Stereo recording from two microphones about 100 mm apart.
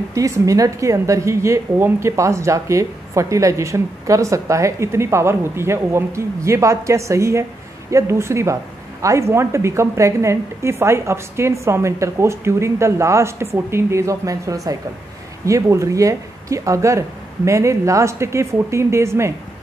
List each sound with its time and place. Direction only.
0.1 s a woman's voice: 35° right (ahead or behind)